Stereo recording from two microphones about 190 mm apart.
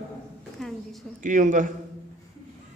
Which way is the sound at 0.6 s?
Centre (ahead or behind).